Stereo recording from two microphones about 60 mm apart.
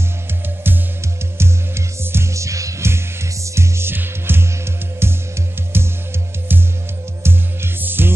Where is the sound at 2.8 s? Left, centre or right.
Right.